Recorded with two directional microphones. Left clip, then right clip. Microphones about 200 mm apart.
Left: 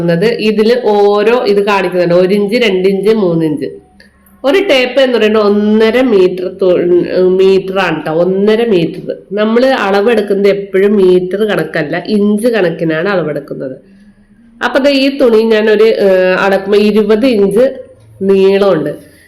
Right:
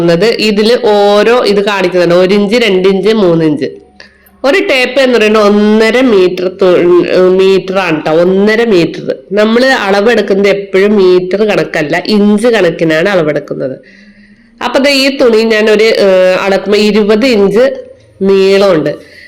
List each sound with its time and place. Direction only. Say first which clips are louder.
0.0 s a woman's voice: right 3 dB; 20° right (ahead or behind)